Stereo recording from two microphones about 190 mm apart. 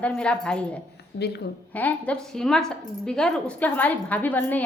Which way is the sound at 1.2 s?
60° left (ahead or behind).